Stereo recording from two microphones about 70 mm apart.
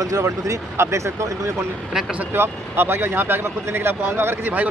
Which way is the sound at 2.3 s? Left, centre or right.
Right.